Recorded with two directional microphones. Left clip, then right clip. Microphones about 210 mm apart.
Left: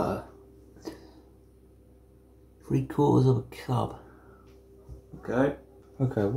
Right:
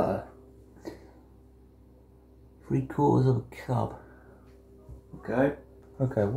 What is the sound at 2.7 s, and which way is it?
Speech, 5° left (ahead or behind).